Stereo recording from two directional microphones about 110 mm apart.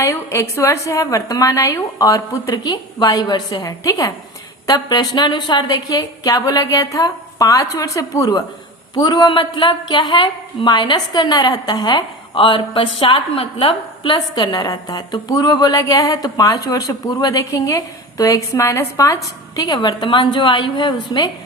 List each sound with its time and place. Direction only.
0.0 s a woman's voice: 25° left (ahead or behind); by 21.2 s 45° left (ahead or behind)